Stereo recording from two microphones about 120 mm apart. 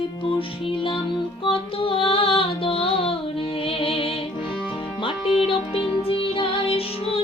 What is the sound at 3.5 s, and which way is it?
Music, 50° left (ahead or behind).